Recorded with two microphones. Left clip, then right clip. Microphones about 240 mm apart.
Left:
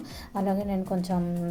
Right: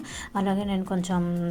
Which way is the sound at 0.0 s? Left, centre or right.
Right.